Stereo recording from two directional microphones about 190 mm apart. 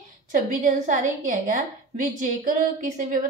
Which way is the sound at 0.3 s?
40° right (ahead or behind).